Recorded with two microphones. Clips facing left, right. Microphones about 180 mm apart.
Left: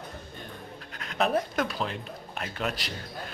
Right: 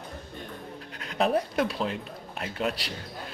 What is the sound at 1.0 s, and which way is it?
Speech, 30° right (ahead or behind).